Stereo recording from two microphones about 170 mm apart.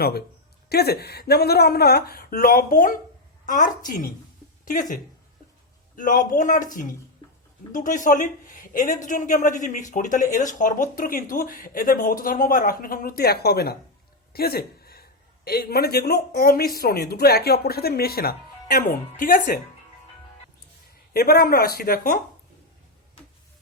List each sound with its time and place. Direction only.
0.0 s a man's voice: 65° left (ahead or behind); by 4.9 s 50° left (ahead or behind)
6.0 s a man's voice: 50° left (ahead or behind); by 13.7 s 70° left (ahead or behind)
14.3 s a sound: 65° left (ahead or behind)
15.4 s speech: 65° left (ahead or behind)
21.1 s speech: 65° left (ahead or behind)